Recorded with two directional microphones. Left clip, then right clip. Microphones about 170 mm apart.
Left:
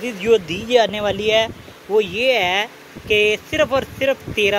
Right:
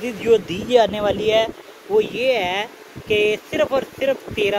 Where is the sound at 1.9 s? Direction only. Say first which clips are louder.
Left 1 dB; 5° right (ahead or behind).